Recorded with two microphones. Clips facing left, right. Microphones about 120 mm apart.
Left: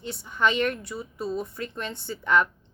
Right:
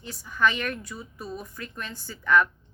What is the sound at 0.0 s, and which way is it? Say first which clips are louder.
A woman's voice: even; 25° left (ahead or behind).